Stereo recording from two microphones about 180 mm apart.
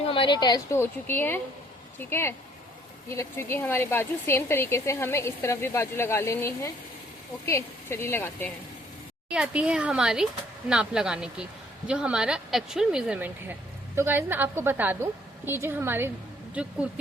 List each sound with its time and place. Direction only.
0.1 s a woman's voice: 25° left (ahead or behind); by 8.5 s 10° left (ahead or behind)
9.3 s speech: 5° right (ahead or behind)